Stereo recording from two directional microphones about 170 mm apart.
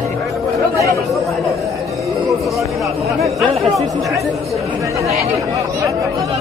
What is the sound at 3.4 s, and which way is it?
Chatter, centre (ahead or behind).